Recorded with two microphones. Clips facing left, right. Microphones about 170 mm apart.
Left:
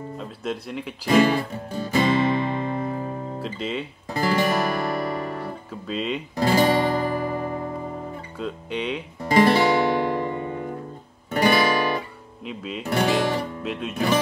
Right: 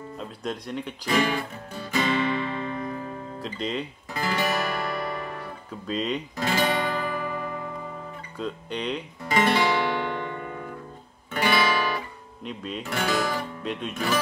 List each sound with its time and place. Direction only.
0.2 s speech: 5° left (ahead or behind)
1.0 s music: 35° left (ahead or behind)
3.4 s speech: 5° left (ahead or behind)
4.1 s music: 35° left (ahead or behind)
5.9 s speech: 5° left (ahead or behind)
6.3 s guitar: 35° left (ahead or behind)
8.4 s speech: 5° left (ahead or behind)
9.2 s music: 35° left (ahead or behind)
11.3 s music: 40° left (ahead or behind)
12.4 s speech: 5° left (ahead or behind)
12.8 s speech: 35° left (ahead or behind)
13.6 s speech: 5° left (ahead or behind)